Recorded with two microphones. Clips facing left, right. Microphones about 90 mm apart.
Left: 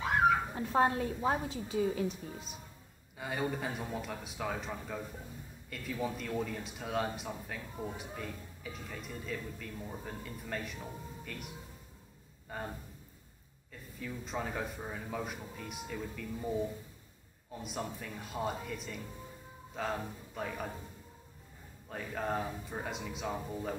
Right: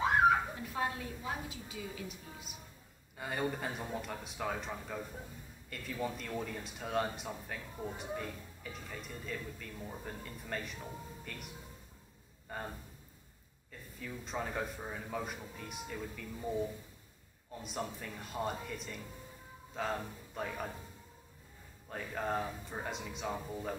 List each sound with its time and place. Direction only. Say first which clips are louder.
0.6 s a woman's voice: left 8 dB; 40° left (ahead or behind)
3.2 s a man's voice: left 1 dB; centre (ahead or behind)
13.9 s speech: left 1 dB; centre (ahead or behind)
21.8 s speech: left 1 dB; centre (ahead or behind)